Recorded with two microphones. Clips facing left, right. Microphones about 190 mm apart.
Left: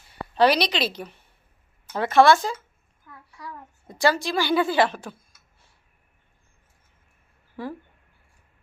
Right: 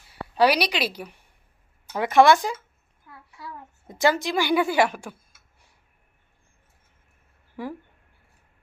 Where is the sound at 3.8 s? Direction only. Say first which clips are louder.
Even; 20° right (ahead or behind).